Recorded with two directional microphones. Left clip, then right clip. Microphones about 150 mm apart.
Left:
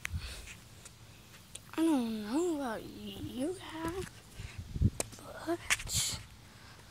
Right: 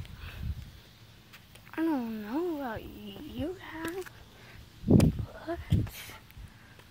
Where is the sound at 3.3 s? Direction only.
25° left (ahead or behind).